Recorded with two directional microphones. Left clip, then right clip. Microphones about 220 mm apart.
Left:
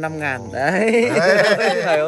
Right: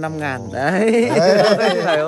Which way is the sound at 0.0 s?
50° right (ahead or behind).